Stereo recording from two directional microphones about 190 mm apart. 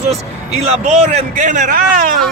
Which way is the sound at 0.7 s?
35° right (ahead or behind).